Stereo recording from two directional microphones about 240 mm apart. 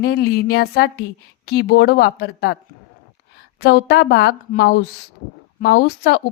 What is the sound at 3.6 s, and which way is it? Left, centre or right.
A woman's voice, left.